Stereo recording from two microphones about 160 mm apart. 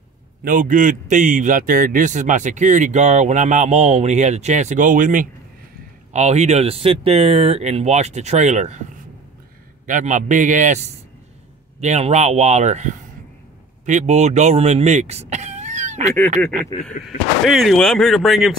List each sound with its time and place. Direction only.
0.4 s a man's voice: 60° right (ahead or behind)
6.1 s a man's voice: 45° right (ahead or behind)
9.8 s a man's voice: 50° right (ahead or behind)
17.5 s speech: centre (ahead or behind)